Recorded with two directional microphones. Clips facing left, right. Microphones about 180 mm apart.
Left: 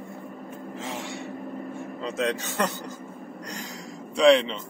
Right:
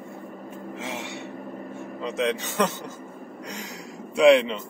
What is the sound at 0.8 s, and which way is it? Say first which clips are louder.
Gasp: even; 70° right (ahead or behind).